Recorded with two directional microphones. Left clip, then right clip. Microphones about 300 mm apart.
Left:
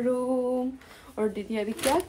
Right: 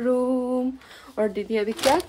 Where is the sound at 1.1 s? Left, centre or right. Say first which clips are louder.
Right 5 dB; centre.